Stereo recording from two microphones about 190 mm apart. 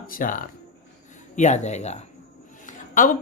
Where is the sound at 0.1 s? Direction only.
45° left (ahead or behind).